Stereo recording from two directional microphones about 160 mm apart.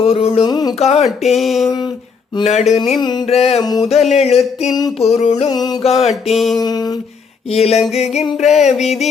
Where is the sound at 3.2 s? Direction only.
40° left (ahead or behind).